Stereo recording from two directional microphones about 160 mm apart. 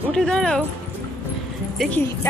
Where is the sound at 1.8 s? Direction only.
10° left (ahead or behind).